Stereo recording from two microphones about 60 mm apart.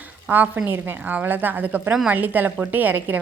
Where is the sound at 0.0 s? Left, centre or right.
Right.